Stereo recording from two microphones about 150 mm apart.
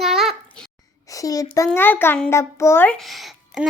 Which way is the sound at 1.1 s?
25° left (ahead or behind).